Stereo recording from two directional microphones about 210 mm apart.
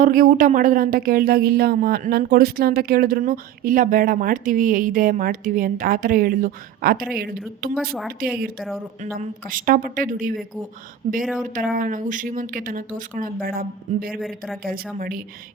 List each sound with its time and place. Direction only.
0.0 s speech: 40° right (ahead or behind)
11.5 s speech: 40° right (ahead or behind)
14.2 s speech: centre (ahead or behind)
14.9 s speech: 40° right (ahead or behind)